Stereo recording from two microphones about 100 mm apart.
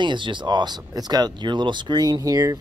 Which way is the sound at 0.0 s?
55° right (ahead or behind).